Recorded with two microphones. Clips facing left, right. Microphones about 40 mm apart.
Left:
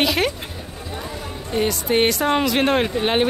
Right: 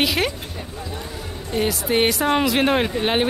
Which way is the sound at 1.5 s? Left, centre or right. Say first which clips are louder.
Left 1 dB; centre.